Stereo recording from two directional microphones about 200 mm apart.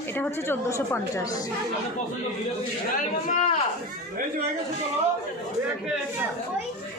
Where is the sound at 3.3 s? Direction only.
35° left (ahead or behind).